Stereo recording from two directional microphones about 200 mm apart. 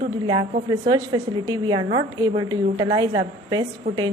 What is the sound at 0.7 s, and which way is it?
A woman's voice, 20° right (ahead or behind).